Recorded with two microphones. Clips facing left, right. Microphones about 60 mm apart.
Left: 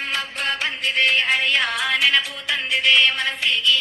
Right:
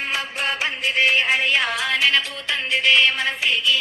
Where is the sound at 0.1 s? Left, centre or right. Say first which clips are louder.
Even; centre.